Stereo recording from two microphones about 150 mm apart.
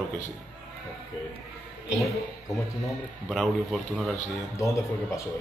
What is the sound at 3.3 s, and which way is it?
Speech, centre (ahead or behind).